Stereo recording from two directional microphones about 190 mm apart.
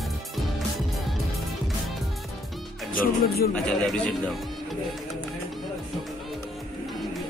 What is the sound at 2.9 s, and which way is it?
Speech, 55° left (ahead or behind).